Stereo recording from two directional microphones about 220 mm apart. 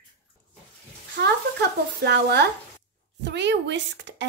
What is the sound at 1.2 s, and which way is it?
A woman's voice, 50° right (ahead or behind).